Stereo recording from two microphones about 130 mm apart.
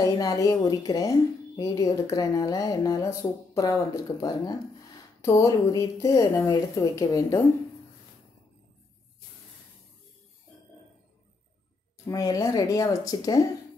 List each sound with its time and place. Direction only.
0.0 s a woman's voice: 30° left (ahead or behind)
12.1 s a woman's voice: 25° left (ahead or behind)